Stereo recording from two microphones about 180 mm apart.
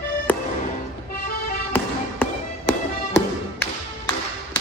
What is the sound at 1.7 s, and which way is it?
Music, 10° left (ahead or behind).